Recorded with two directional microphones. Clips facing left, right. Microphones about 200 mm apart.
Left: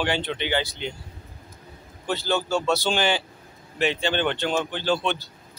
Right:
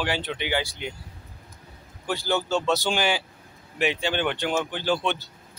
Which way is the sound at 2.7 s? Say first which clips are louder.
Left 1 dB; 15° right (ahead or behind).